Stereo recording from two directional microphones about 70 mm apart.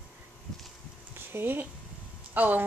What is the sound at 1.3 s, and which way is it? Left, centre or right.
Speech, right.